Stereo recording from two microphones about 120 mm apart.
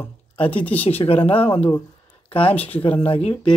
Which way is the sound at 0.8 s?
55° left (ahead or behind).